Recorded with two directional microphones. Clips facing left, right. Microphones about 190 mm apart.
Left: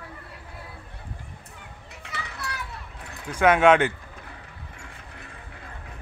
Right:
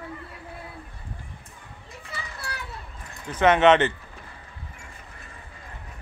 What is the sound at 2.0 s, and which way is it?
Children playing, 70° left (ahead or behind).